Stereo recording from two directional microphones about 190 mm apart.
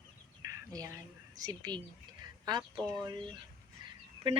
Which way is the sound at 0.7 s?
20° right (ahead or behind).